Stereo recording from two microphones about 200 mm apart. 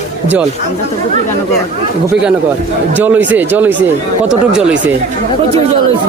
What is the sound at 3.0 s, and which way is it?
Speech, 10° right (ahead or behind).